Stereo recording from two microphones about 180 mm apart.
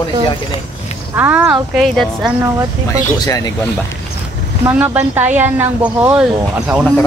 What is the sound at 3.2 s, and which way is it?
Speech, 20° left (ahead or behind).